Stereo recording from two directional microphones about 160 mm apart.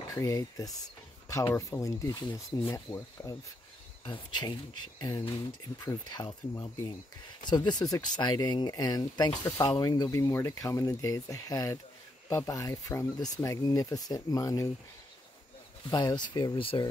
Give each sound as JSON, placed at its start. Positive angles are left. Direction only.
{"t": 0.1, "sound": "speech", "side_deg": 20}
{"t": 15.9, "sound": "speech", "side_deg": 25}